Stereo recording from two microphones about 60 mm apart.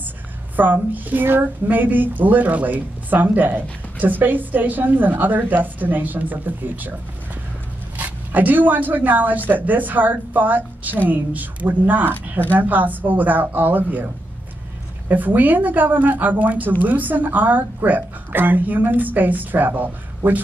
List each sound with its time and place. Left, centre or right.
0.6 s speech: right
8.0 s a woman's voice: right
12.1 s speech: left
12.5 s speech: right
15.0 s a woman's voice: right